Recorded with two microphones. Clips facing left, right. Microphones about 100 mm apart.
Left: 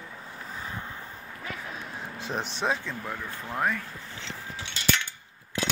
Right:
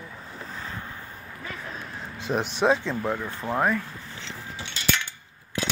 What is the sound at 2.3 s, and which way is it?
Speech, 15° right (ahead or behind).